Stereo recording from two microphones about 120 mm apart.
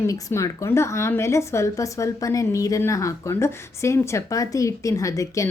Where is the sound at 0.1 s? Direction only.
25° left (ahead or behind).